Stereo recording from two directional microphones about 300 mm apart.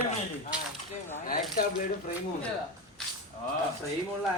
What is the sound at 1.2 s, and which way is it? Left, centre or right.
Speech, left.